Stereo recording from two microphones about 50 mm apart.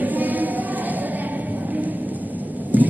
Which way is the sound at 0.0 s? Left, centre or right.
Right.